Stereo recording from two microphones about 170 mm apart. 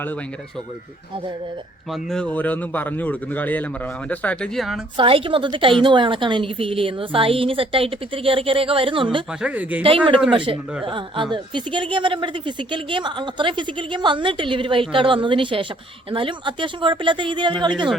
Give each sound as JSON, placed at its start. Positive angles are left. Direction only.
{"t": 1.9, "sound": "speech", "side_deg": 5}
{"t": 4.9, "sound": "a woman's voice", "side_deg": -30}
{"t": 9.4, "sound": "speech", "side_deg": -10}
{"t": 9.8, "sound": "a woman's voice", "side_deg": -30}